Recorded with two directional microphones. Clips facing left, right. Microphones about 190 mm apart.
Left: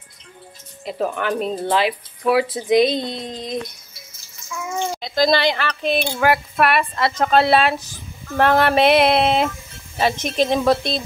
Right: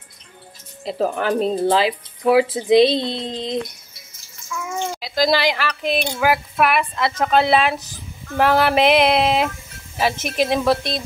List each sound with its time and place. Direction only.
0.8 s speech: 35° right (ahead or behind)
5.0 s a woman's voice: 5° right (ahead or behind)